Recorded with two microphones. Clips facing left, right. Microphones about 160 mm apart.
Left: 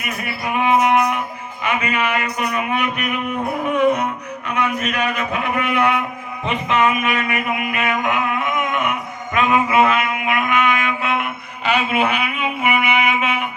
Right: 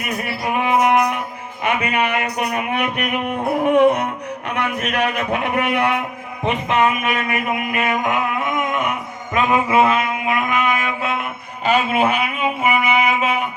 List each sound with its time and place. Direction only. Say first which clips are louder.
0.3 s a sound: left 2 dB; 45° right (ahead or behind)
1.6 s a man's voice: right 1 dB; 55° right (ahead or behind)
4.4 s a man's voice: left 2 dB; 75° right (ahead or behind); by 5.8 s 60° right (ahead or behind)
6.4 s speech: right 1 dB; 50° right (ahead or behind)
6.8 s a sound: even; 40° right (ahead or behind)
9.3 s music: even; 30° right (ahead or behind)